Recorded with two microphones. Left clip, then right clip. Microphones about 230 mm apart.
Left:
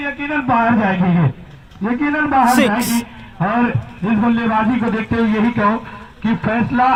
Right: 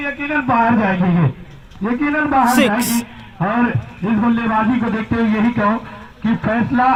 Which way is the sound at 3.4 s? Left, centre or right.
Left.